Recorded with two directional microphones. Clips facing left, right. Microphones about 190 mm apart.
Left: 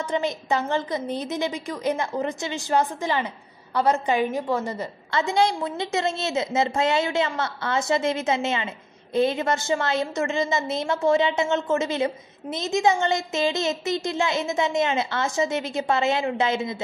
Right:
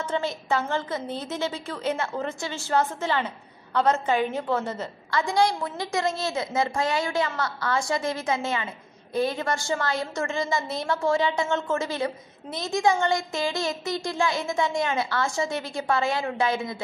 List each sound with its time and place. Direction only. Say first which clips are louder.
0.0 s a woman's voice: left 2 dB; 15° left (ahead or behind)
5.1 s a woman's voice: left 1 dB; 25° left (ahead or behind)